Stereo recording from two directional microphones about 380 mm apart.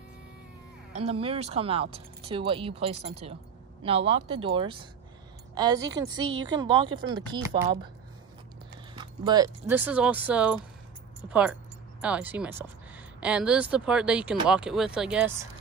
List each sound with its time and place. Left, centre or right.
0.9 s speech: centre
8.9 s speech: centre